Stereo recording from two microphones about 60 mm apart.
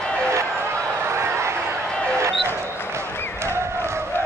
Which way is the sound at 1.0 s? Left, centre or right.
Right.